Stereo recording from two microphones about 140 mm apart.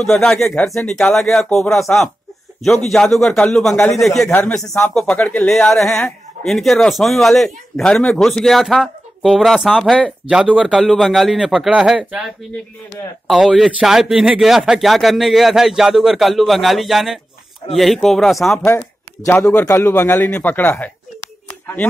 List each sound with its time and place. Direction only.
0.0 s speech: 5° left (ahead or behind)
3.7 s a man's voice: 20° left (ahead or behind)
4.0 s speech: centre (ahead or behind)
4.3 s speech: 10° left (ahead or behind); by 12.3 s 5° right (ahead or behind)
13.3 s speech: centre (ahead or behind)
18.6 s a man's voice: 20° left (ahead or behind)